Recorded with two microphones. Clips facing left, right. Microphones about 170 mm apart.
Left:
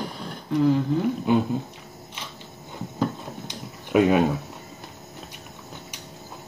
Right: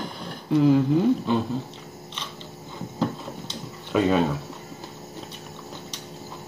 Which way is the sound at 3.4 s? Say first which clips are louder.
Right 1 dB; 15° left (ahead or behind).